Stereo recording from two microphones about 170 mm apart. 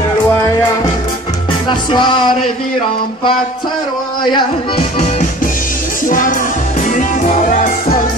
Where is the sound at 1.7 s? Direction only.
25° left (ahead or behind).